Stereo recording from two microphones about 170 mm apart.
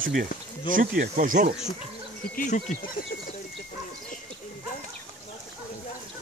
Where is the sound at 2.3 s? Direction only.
50° left (ahead or behind).